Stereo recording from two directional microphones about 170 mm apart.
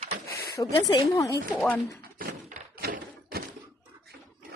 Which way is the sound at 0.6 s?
20° left (ahead or behind).